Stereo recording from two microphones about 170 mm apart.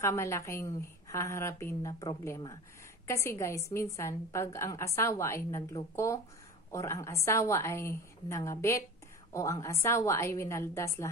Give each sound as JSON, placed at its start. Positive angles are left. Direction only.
{"t": 0.0, "sound": "a woman's voice", "side_deg": 15}